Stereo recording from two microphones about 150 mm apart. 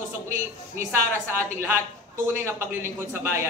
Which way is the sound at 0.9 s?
15° right (ahead or behind).